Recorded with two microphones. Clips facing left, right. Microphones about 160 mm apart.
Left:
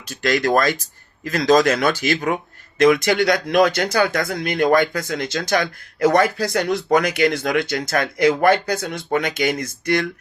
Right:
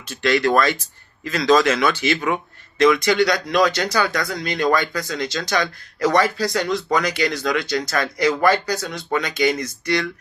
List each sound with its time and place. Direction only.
0.1 s speech: 40° left (ahead or behind)